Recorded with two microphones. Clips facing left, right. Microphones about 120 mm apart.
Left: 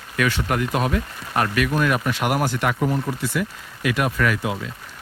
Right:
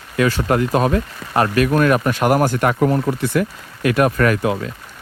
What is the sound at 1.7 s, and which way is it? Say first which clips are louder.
Speech: right 6 dB; 50° right (ahead or behind).